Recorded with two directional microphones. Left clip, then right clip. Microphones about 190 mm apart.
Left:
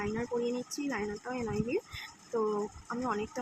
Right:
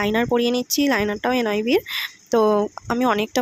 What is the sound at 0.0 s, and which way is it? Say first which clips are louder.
Speech: right 14 dB; 60° right (ahead or behind).